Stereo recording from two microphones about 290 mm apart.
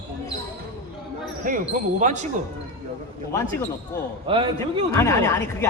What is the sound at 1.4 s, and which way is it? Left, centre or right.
Speech, right.